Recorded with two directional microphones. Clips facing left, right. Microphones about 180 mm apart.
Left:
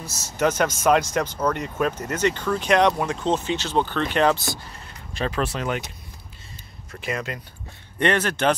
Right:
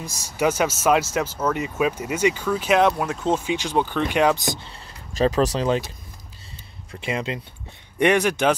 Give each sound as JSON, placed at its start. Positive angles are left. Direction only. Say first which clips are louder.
{"t": 0.0, "sound": "speech", "louder": "right 1 dB", "side_deg": -10}
{"t": 5.1, "sound": "speech", "louder": "right 6 dB", "side_deg": -35}
{"t": 7.0, "sound": "speech", "louder": "right 2 dB", "side_deg": -25}
{"t": 8.0, "sound": "speech", "louder": "right 3 dB", "side_deg": -10}